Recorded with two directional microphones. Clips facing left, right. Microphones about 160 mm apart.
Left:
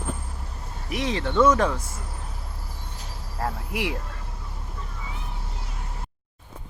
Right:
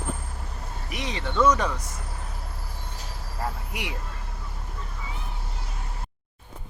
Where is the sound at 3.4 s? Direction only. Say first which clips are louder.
Left 4 dB; centre (ahead or behind).